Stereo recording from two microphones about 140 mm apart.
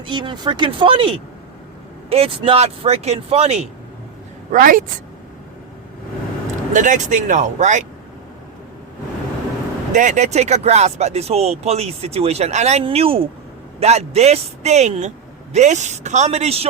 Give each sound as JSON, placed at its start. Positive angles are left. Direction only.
{"t": 0.0, "sound": "speech", "side_deg": -35}
{"t": 4.5, "sound": "speech", "side_deg": -75}
{"t": 6.7, "sound": "speech", "side_deg": -65}
{"t": 9.9, "sound": "speech", "side_deg": -60}